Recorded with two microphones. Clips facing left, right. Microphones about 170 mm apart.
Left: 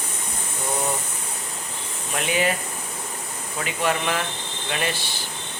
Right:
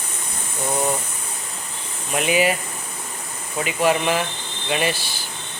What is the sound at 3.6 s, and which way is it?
Speech, 10° right (ahead or behind).